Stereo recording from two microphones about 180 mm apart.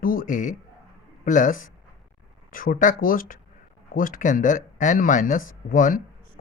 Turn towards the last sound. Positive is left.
turn(degrees=50)  # may be behind; listen again after turning